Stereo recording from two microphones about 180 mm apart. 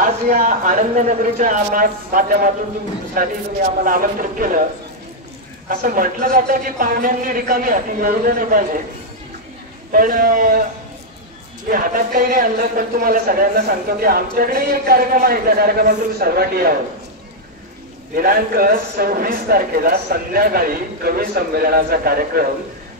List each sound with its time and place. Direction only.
0.0 s speech: 50° right (ahead or behind)
5.7 s speech: 50° right (ahead or behind)
9.9 s speech: 50° right (ahead or behind)
11.7 s a man's voice: 55° right (ahead or behind)
18.1 s a man's voice: 55° right (ahead or behind)